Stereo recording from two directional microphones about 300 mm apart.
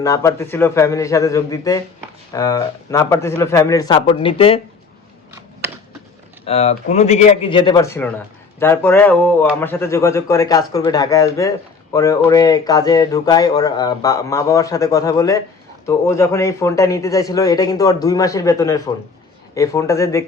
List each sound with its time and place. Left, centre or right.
0.0 s speech: centre
6.4 s a man's voice: left